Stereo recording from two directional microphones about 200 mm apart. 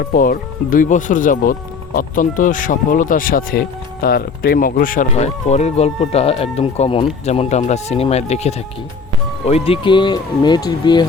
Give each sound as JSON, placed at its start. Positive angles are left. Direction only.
{"t": 0.0, "sound": "speech", "side_deg": 45}